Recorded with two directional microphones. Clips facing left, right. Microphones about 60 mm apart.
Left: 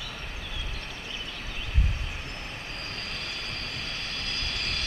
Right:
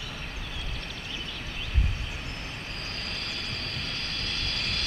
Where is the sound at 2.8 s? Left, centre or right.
Centre.